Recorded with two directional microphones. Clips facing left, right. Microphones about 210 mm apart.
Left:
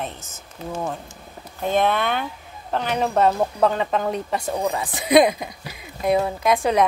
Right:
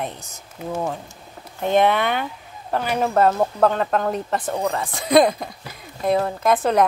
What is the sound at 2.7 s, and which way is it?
A woman's voice, 5° right (ahead or behind).